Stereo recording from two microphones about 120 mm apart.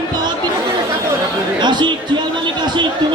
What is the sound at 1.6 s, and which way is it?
Speech, 40° right (ahead or behind).